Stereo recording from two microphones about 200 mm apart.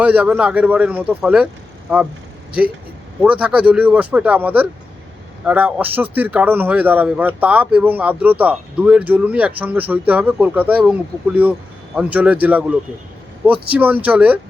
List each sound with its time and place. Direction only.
0.0 s a man's voice: 5° right (ahead or behind)
3.2 s a man's voice: 5° right (ahead or behind)